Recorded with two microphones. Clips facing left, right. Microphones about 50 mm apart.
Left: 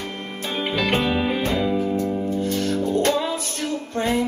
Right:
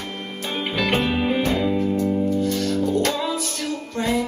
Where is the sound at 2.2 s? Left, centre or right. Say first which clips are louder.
Right 1 dB; left.